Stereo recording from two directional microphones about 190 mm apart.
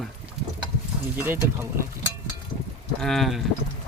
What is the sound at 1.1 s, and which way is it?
Speech, 10° right (ahead or behind).